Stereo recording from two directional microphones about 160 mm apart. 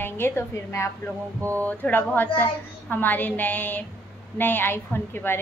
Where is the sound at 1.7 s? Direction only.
10° left (ahead or behind).